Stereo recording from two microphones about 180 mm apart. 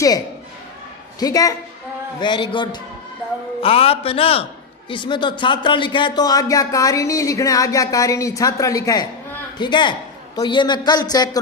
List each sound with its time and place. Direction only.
1.2 s a man's voice: 20° left (ahead or behind)